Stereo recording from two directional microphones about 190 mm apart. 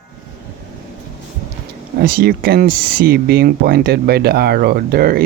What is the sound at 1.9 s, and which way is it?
Speech, 50° right (ahead or behind).